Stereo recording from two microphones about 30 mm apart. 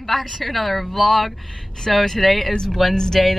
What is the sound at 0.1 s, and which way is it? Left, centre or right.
Speech, centre.